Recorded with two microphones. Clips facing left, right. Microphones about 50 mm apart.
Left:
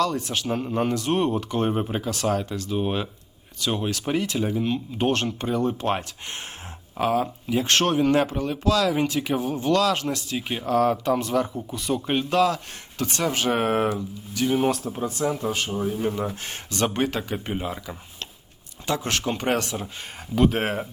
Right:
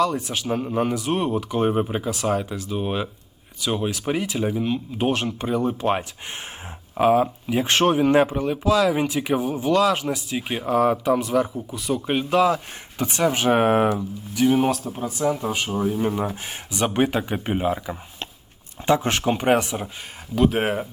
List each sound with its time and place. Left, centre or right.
0.0 s speech: centre
6.9 s speech: centre
20.3 s speech: centre